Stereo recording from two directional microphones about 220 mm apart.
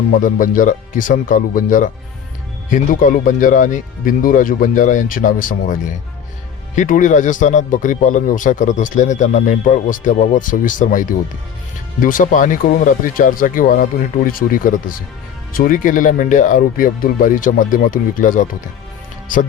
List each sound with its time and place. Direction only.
0.2 s speech: 35° left (ahead or behind)
6.7 s speech: 35° left (ahead or behind)